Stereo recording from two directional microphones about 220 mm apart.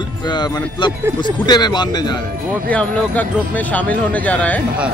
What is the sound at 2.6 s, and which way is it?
Speech, 5° left (ahead or behind).